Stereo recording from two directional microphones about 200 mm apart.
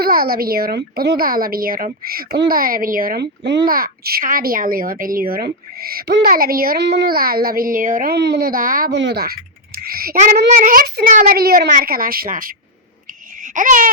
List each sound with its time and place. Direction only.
0.0 s a child's voice: 50° right (ahead or behind)
3.7 s a child's voice: 45° right (ahead or behind)
9.0 s a child's voice: 60° right (ahead or behind)
13.4 s a sound: 40° right (ahead or behind)